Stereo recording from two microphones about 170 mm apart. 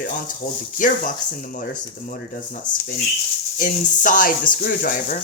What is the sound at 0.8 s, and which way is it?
Speech, 50° left (ahead or behind).